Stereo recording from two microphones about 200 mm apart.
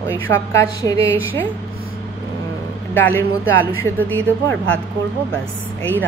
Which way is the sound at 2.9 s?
10° left (ahead or behind).